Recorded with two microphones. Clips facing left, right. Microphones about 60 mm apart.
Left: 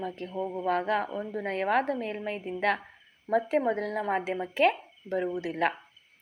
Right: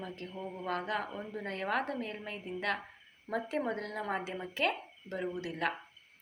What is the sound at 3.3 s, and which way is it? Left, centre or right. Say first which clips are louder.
A woman's voice: left 8 dB; left.